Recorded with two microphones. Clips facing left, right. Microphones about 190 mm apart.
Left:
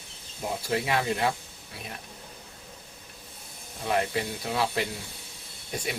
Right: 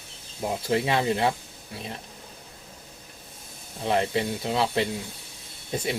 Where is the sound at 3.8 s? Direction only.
25° right (ahead or behind).